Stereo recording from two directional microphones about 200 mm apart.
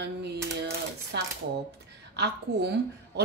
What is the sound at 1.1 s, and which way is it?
Shuffling cards, 55° right (ahead or behind).